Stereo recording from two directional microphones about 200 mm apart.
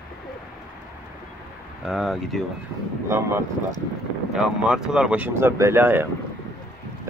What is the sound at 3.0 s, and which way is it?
Speech, 15° right (ahead or behind).